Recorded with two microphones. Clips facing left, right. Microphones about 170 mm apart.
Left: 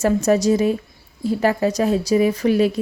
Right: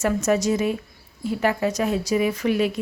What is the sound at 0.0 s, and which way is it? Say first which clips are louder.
Speech: left 4 dB; 35° left (ahead or behind).